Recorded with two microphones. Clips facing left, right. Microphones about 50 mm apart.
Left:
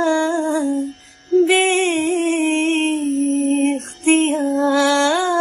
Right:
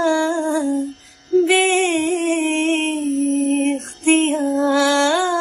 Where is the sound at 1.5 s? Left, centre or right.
Left.